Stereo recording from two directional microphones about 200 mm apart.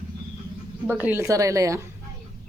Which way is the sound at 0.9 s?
10° right (ahead or behind).